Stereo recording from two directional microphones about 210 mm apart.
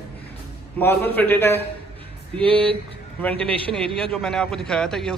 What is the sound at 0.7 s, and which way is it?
Speech, 10° left (ahead or behind).